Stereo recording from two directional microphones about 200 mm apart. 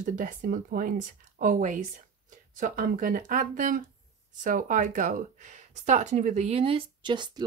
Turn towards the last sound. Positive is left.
turn(degrees=-25)  # may be behind; listen again after turning